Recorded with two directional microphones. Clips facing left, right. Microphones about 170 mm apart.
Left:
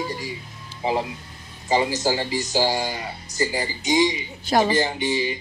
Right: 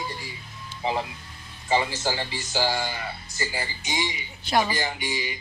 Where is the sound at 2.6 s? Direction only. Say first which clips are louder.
Left 3 dB; 15° left (ahead or behind).